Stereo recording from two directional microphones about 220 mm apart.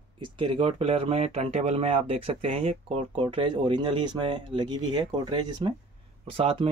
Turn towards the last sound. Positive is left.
turn(degrees=-25)  # may be behind; listen again after turning